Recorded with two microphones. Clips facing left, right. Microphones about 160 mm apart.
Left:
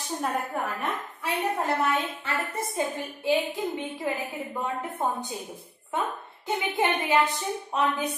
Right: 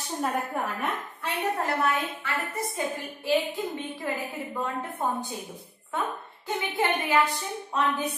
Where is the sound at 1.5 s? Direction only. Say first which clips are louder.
Left 1 dB; 20° left (ahead or behind).